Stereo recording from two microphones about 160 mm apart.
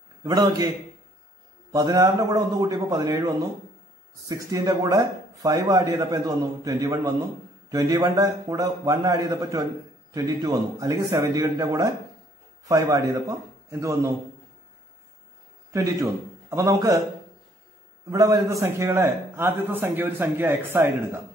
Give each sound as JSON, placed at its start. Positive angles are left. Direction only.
{"t": 0.2, "sound": "speech", "side_deg": -25}
{"t": 1.7, "sound": "speech", "side_deg": -25}
{"t": 15.7, "sound": "a man's voice", "side_deg": -20}
{"t": 18.1, "sound": "a man's voice", "side_deg": -20}